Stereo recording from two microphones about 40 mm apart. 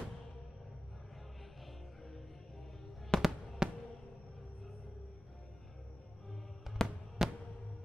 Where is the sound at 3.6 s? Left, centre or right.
Centre.